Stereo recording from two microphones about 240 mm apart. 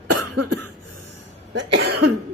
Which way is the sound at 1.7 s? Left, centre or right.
Right.